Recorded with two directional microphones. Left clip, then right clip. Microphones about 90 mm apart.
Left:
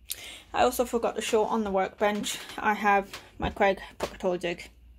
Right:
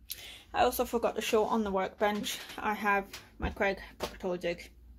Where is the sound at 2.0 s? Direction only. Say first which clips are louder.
Left 4 dB; 15° left (ahead or behind); by 4.7 s 30° left (ahead or behind).